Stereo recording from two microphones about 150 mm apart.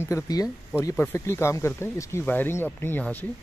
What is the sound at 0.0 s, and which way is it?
Speech, 20° left (ahead or behind).